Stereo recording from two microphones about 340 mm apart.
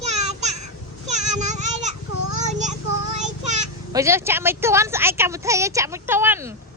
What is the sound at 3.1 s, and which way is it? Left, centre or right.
Child singing, right.